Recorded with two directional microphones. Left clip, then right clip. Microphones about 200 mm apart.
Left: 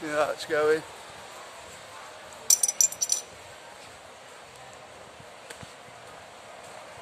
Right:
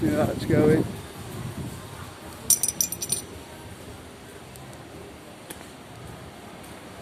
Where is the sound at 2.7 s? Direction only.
15° left (ahead or behind).